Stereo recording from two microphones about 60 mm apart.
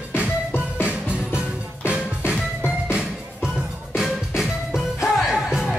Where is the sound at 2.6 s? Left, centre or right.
Centre.